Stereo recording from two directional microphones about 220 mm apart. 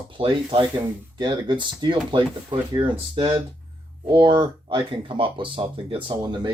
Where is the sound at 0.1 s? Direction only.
20° right (ahead or behind).